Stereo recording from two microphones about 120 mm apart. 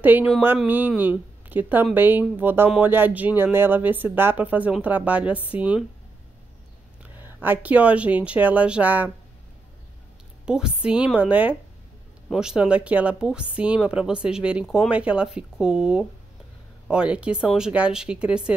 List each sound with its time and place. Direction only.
0.0 s speech: 15° right (ahead or behind)
7.2 s speech: 15° right (ahead or behind)
10.4 s speech: 5° right (ahead or behind)